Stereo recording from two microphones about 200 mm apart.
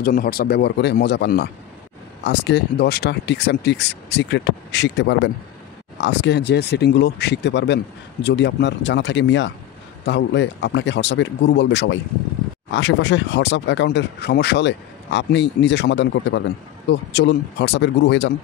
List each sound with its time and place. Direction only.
0.0 s speech: 45° left (ahead or behind)